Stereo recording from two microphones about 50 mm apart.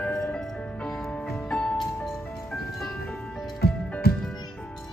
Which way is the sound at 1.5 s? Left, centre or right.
Left.